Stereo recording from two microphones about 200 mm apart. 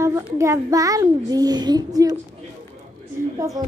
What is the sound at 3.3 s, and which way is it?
Speech, 15° right (ahead or behind).